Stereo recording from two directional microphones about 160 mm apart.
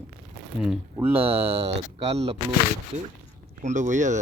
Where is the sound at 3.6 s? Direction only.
50° right (ahead or behind).